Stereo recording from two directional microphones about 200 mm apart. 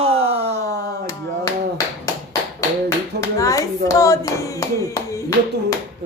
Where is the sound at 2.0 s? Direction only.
15° left (ahead or behind).